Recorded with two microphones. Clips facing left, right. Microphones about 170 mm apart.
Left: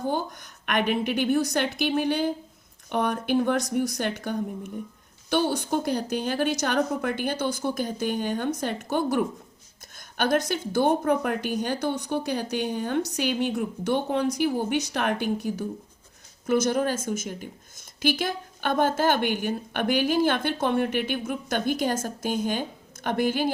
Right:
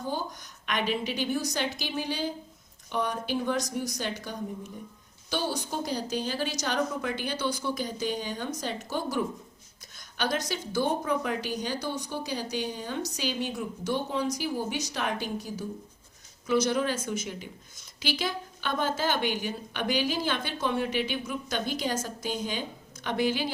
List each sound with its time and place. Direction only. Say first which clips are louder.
0.1 s a woman's voice: left 5 dB; 55° left (ahead or behind)
16.5 s speech: left 3 dB; 50° left (ahead or behind)